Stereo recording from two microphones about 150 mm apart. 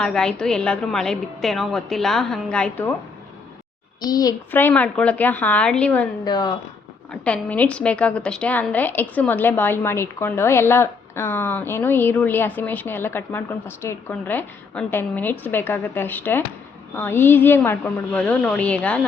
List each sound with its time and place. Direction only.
0.0 s a woman's voice: 5° left (ahead or behind)
4.0 s a child's voice: 25° left (ahead or behind)
4.5 s a woman's voice: 10° left (ahead or behind)
6.2 s a child's voice: 30° left (ahead or behind)
7.1 s a woman's voice: 10° left (ahead or behind)